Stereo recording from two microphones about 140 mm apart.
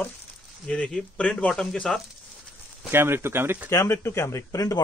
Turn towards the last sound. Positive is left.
turn(degrees=25)  # may be behind; listen again after turning